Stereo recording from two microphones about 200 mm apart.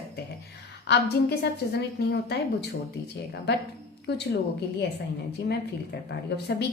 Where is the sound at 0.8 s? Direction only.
55° left (ahead or behind).